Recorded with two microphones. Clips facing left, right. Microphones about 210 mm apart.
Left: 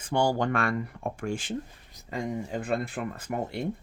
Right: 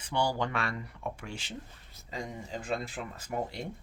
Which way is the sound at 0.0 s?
50° left (ahead or behind).